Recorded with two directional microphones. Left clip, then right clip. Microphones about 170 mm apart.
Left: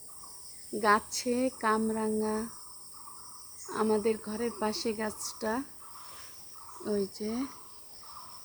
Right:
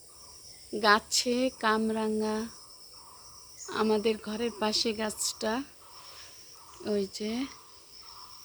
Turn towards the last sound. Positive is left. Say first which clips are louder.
# right 1 dB
turn(degrees=-30)  # may be behind; listen again after turning